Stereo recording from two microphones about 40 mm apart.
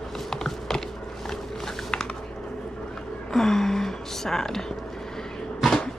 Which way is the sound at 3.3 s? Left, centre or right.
Centre.